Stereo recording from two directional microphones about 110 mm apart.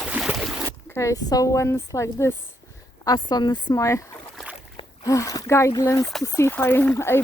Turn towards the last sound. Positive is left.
turn(degrees=20)  # may be behind; listen again after turning